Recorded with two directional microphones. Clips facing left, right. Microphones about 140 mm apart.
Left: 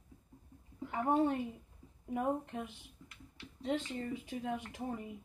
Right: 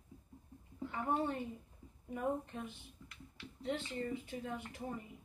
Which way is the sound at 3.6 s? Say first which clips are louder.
Left 4 dB; 90° left.